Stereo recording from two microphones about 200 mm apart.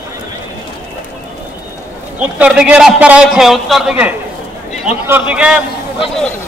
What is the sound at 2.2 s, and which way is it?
A man's voice, 5° right (ahead or behind).